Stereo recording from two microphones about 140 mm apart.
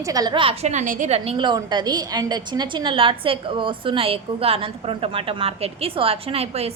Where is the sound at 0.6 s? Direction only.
55° right (ahead or behind).